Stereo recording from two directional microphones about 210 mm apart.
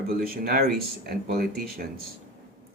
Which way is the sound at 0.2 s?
45° right (ahead or behind).